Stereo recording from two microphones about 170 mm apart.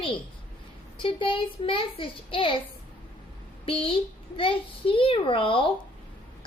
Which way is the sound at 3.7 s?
30° left (ahead or behind).